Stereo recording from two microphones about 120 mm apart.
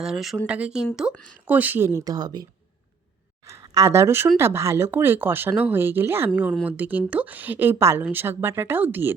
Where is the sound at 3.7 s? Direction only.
25° right (ahead or behind).